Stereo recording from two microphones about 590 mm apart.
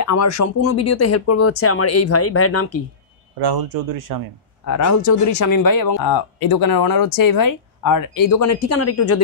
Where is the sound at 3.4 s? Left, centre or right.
Right.